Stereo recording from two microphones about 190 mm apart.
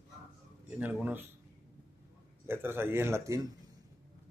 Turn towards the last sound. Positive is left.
turn(degrees=-15)  # may be behind; listen again after turning